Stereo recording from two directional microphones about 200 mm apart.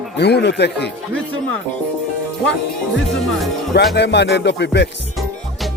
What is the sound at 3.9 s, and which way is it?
Music, 60° left (ahead or behind).